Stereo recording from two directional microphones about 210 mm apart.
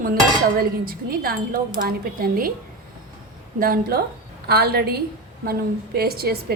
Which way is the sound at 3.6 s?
45° right (ahead or behind).